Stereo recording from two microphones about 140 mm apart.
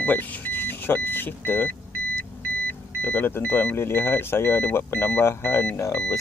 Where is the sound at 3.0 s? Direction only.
15° left (ahead or behind).